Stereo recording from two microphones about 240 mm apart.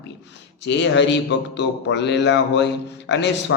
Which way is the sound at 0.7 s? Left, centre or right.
Left.